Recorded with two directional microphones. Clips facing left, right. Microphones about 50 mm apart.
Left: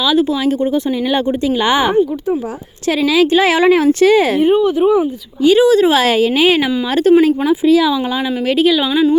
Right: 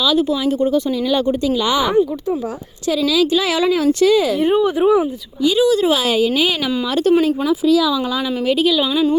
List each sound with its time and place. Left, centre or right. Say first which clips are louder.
0.0 s speech: left 3 dB; left
4.4 s speech: left 2 dB; centre
5.4 s speech: left 5 dB; left